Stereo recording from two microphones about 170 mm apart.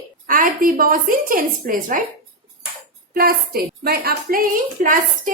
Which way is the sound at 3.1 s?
60° right (ahead or behind).